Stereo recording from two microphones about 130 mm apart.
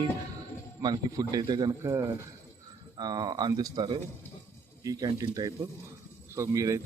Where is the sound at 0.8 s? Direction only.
30° right (ahead or behind).